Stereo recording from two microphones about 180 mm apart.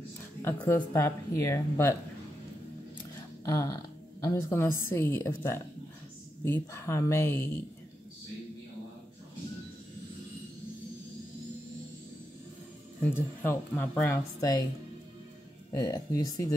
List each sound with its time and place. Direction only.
0.4 s a woman's voice: 10° left (ahead or behind)
3.4 s a woman's voice: 20° left (ahead or behind)
13.0 s a woman's voice: 10° left (ahead or behind)
15.7 s speech: 20° left (ahead or behind)